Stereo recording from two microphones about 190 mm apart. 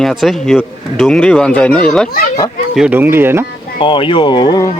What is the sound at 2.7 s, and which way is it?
Speech, 5° right (ahead or behind).